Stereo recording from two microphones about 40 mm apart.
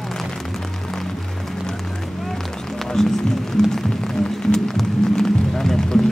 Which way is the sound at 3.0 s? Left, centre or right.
Centre.